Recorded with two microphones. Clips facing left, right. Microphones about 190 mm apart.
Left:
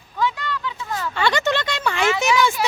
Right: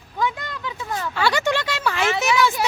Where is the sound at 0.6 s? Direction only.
20° right (ahead or behind).